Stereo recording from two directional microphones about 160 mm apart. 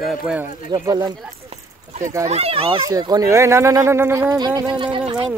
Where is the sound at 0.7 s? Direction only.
25° right (ahead or behind).